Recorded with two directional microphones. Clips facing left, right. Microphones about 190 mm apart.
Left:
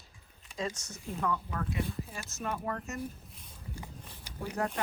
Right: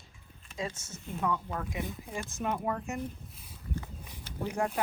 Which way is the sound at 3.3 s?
5° right (ahead or behind).